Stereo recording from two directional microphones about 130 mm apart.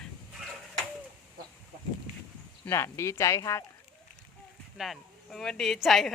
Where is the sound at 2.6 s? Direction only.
20° left (ahead or behind).